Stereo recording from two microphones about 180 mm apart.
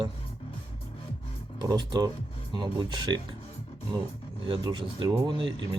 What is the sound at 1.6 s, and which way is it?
Speech, 25° right (ahead or behind).